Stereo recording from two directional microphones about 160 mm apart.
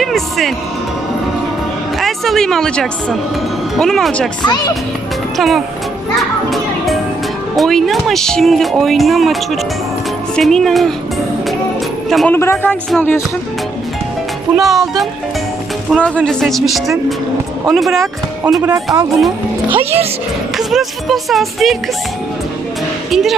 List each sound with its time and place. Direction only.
0.0 s music: centre (ahead or behind)
2.0 s a woman's voice: centre (ahead or behind)
4.4 s speech: 25° left (ahead or behind)
5.4 s speech: centre (ahead or behind)
6.5 s music: centre (ahead or behind)
7.5 s speech: centre (ahead or behind)
12.0 s speech: centre (ahead or behind)
12.3 s speech: 15° left (ahead or behind)
14.5 s speech: centre (ahead or behind)
18.9 s speech: 25° right (ahead or behind)
20.6 s speech: centre (ahead or behind)
23.1 s speech: centre (ahead or behind)